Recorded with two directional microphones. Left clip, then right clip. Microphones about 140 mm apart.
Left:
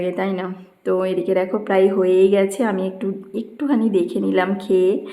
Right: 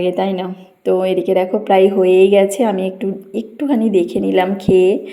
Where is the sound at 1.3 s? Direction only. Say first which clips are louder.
Right 5 dB; 15° right (ahead or behind).